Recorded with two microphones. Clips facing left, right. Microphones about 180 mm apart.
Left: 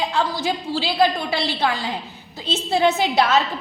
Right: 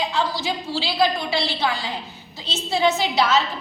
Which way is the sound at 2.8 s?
55° left (ahead or behind).